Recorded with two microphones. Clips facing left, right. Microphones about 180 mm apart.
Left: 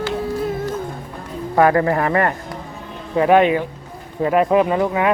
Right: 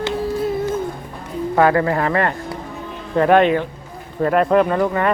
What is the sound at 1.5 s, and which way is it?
Speech, 25° left (ahead or behind).